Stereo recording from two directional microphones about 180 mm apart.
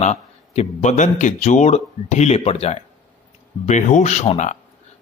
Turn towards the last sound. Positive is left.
turn(degrees=40)  # may be behind; listen again after turning